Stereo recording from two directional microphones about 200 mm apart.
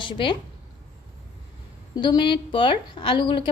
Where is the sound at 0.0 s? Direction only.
25° left (ahead or behind).